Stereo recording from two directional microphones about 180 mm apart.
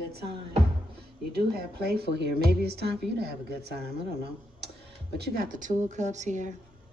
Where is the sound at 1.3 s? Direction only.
60° right (ahead or behind).